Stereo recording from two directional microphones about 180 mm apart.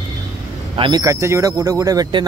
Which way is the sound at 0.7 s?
25° right (ahead or behind).